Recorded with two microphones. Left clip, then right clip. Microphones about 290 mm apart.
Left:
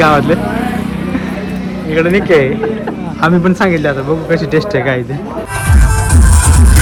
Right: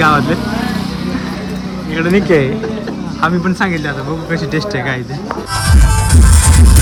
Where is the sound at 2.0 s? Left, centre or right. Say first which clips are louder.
Left 3 dB; centre.